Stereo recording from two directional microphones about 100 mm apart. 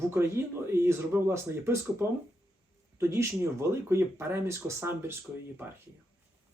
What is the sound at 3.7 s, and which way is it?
Speech, 25° right (ahead or behind).